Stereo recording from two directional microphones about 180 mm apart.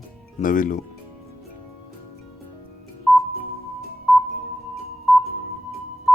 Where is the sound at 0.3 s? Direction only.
50° left (ahead or behind).